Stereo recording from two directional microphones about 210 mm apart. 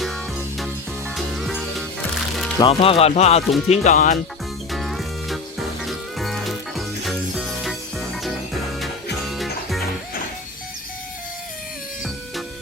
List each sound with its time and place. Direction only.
1.1 s music: centre (ahead or behind)
2.6 s speech: 25° left (ahead or behind)
4.7 s music: centre (ahead or behind)
9.3 s music: centre (ahead or behind)